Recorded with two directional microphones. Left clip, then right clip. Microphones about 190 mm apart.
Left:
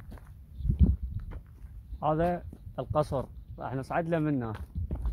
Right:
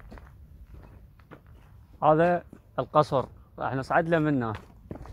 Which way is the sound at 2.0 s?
25° right (ahead or behind).